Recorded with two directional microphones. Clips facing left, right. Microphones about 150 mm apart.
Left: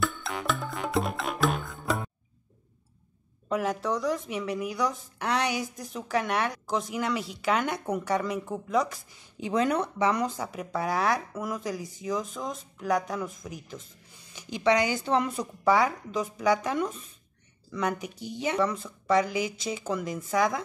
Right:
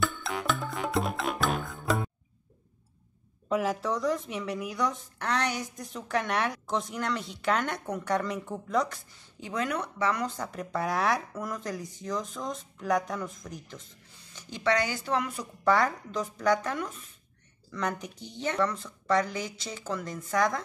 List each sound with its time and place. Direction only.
0.0 s music: centre (ahead or behind)
3.4 s speech: centre (ahead or behind)
9.4 s speech: 25° left (ahead or behind)
15.6 s speech: 10° left (ahead or behind)
16.7 s speech: 20° left (ahead or behind)
17.6 s speech: 5° left (ahead or behind)